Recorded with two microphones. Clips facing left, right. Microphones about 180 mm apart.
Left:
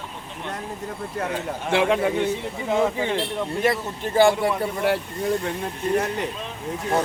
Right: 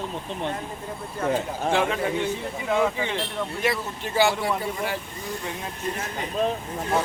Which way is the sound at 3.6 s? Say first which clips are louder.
Left 4 dB; 50° left (ahead or behind).